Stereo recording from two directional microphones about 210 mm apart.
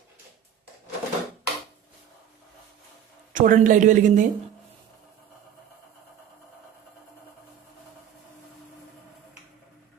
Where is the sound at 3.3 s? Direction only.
40° right (ahead or behind).